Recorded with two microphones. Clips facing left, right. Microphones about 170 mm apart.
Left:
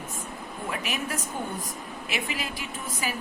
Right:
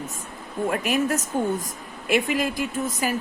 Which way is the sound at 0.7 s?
45° right (ahead or behind).